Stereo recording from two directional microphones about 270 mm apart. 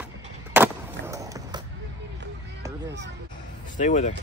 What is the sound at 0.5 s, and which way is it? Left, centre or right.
Skateboard, centre.